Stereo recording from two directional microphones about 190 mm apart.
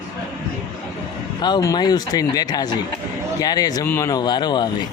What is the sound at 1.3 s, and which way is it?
Speech, 20° left (ahead or behind).